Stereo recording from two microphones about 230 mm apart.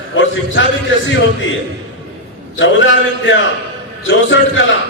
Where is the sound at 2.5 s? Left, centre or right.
Left.